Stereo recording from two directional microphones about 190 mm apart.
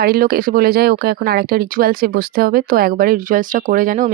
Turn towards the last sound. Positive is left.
turn(degrees=-45)  # may be behind; listen again after turning